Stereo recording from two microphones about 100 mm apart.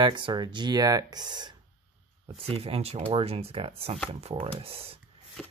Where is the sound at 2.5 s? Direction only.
80° right.